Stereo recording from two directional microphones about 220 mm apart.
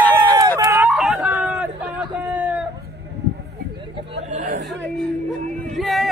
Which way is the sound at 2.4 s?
5° right (ahead or behind).